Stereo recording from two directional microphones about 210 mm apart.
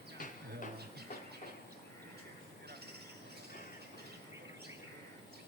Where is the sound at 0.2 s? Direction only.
40° left (ahead or behind).